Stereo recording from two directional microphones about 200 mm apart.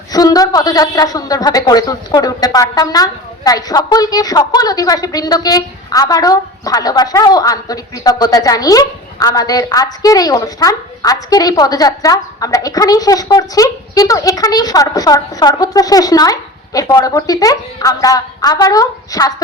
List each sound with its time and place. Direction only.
0.1 s a woman's voice: 20° left (ahead or behind)